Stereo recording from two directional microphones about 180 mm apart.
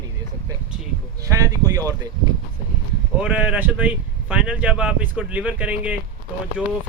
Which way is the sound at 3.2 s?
5° right (ahead or behind).